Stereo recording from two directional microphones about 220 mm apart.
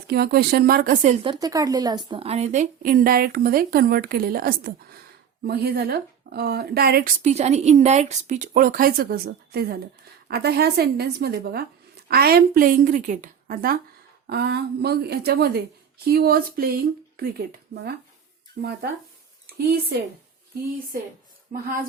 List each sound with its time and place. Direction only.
0.1 s a woman's voice: 45° right (ahead or behind)
7.2 s a woman's voice: 30° right (ahead or behind); by 17.9 s 45° right (ahead or behind)
19.5 s speech: 45° right (ahead or behind)